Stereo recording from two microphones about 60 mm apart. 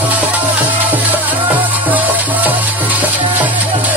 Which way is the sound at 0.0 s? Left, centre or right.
Right.